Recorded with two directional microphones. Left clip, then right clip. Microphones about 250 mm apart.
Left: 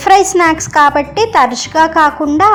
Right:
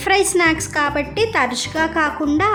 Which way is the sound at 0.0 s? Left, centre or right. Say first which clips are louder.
Left 8 dB; centre.